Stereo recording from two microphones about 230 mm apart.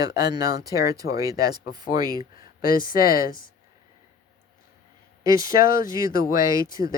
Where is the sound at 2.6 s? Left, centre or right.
Left.